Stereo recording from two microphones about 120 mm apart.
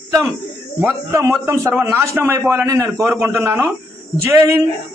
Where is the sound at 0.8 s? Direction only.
20° right (ahead or behind).